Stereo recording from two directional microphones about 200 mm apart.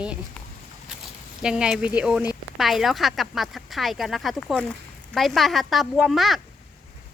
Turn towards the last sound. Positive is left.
turn(degrees=0)  # may be behind; listen again after turning